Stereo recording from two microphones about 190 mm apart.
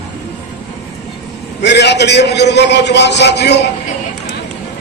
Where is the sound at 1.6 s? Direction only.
65° left (ahead or behind).